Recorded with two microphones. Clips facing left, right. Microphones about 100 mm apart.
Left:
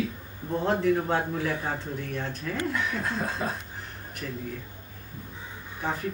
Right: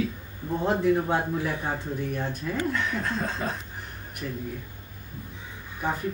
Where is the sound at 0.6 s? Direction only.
15° right (ahead or behind).